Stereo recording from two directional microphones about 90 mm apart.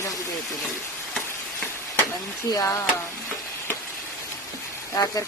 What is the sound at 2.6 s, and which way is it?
Speech, 35° left (ahead or behind).